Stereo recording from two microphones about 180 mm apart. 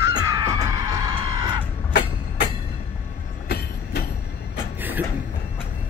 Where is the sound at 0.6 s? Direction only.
20° right (ahead or behind).